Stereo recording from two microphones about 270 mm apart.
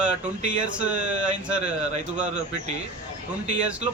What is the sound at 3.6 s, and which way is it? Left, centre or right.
Speech, centre.